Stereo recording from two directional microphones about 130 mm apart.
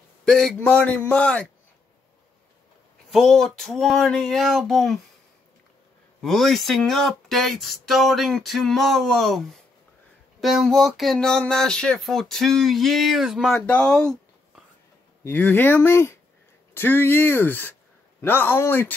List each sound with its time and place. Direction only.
0.2 s a man's voice: 5° left (ahead or behind)
3.1 s speech: centre (ahead or behind)
6.2 s speech: centre (ahead or behind)
13.6 s a man's voice: 10° left (ahead or behind)